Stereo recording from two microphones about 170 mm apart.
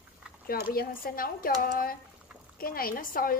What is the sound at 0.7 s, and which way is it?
Speech, 60° left (ahead or behind).